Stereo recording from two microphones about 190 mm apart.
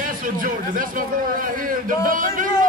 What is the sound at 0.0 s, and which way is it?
A man's voice, 45° right (ahead or behind).